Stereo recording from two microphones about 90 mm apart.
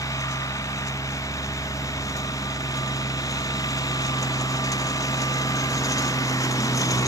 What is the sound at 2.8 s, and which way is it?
Vehicle, 40° left (ahead or behind).